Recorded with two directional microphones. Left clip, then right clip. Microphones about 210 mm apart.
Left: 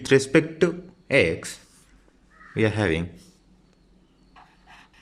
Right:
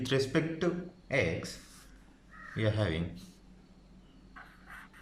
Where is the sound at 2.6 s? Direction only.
40° left (ahead or behind).